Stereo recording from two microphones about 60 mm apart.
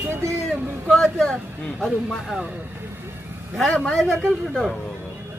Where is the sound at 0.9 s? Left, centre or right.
Centre.